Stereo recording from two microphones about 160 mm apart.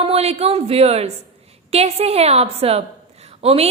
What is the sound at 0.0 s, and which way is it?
A woman's voice, 40° right (ahead or behind).